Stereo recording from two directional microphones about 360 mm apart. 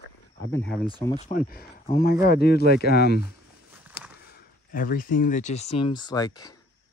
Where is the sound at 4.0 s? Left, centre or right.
Left.